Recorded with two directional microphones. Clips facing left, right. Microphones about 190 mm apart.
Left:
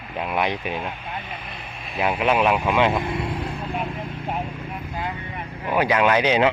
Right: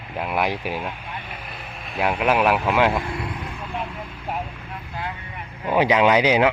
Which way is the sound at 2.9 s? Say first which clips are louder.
Left 2 dB; 20° left (ahead or behind).